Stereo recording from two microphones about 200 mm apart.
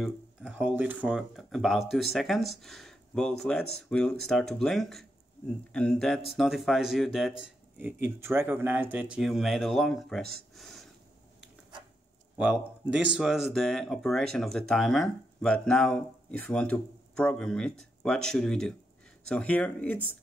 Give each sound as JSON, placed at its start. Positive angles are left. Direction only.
{"t": 0.0, "sound": "speech", "side_deg": -5}
{"t": 10.5, "sound": "a sound", "side_deg": 0}
{"t": 12.4, "sound": "speech", "side_deg": -5}